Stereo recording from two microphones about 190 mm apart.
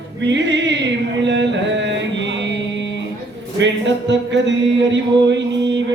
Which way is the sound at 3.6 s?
70° right (ahead or behind).